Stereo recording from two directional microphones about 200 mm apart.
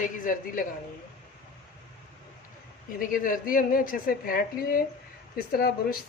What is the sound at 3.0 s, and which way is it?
A woman's voice, 45° left (ahead or behind).